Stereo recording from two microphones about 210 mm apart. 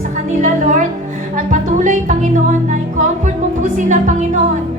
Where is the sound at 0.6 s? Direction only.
35° right (ahead or behind).